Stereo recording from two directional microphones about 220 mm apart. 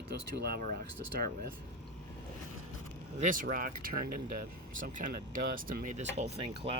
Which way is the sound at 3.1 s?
35° right (ahead or behind).